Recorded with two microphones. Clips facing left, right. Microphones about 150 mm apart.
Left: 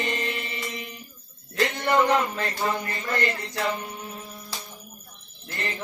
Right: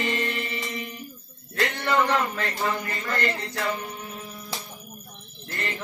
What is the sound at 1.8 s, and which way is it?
Music, 15° left (ahead or behind).